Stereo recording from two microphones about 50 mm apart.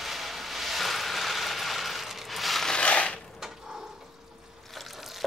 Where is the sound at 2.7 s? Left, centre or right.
Centre.